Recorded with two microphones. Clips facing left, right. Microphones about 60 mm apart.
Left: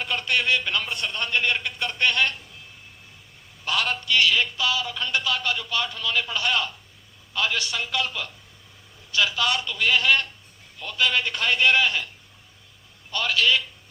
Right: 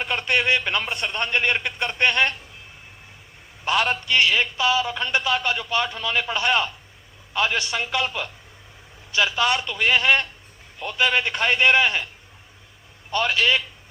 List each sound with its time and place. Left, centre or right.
0.0 s a sound: right
3.6 s a man's voice: right
13.1 s a man's voice: right